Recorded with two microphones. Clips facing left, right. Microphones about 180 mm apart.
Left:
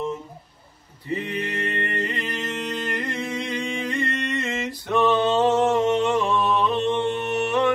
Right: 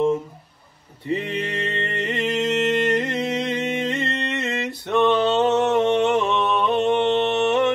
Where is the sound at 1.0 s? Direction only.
20° right (ahead or behind).